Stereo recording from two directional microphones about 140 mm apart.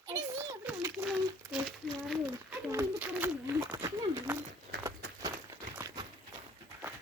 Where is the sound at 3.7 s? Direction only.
25° right (ahead or behind).